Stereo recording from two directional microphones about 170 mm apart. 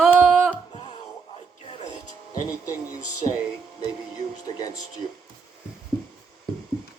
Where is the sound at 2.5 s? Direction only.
20° left (ahead or behind).